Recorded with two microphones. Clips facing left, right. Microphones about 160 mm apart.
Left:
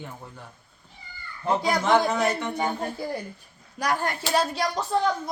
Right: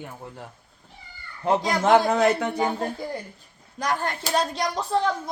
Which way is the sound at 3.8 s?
10° left (ahead or behind).